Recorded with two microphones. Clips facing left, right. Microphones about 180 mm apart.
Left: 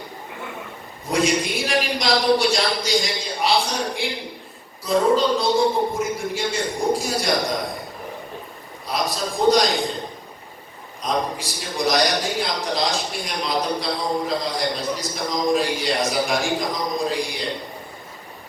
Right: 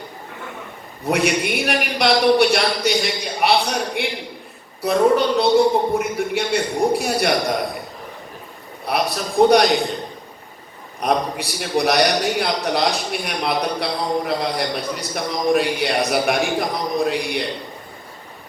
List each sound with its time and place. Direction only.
1.0 s a man's voice: 65° right (ahead or behind)
8.9 s a man's voice: 65° right (ahead or behind)
11.0 s a man's voice: 65° right (ahead or behind)